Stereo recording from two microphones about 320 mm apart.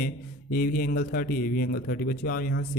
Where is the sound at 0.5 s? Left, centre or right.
Left.